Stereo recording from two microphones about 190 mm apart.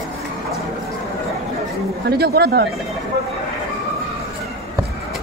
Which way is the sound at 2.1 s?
55° right (ahead or behind).